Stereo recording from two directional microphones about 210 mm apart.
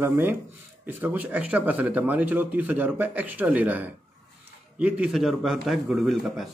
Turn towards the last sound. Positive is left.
turn(degrees=0)  # may be behind; listen again after turning